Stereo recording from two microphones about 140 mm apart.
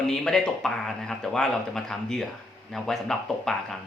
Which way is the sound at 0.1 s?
5° left (ahead or behind).